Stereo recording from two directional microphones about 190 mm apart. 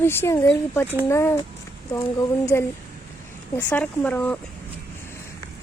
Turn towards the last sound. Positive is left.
turn(degrees=10)  # may be behind; listen again after turning